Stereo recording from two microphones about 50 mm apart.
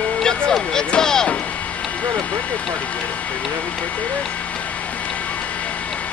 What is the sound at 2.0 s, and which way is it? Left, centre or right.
Vehicle, left.